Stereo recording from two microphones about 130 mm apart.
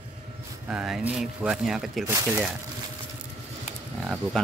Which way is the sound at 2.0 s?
20° right (ahead or behind).